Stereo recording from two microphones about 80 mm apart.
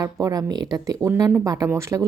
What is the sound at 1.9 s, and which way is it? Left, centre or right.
Speech, right.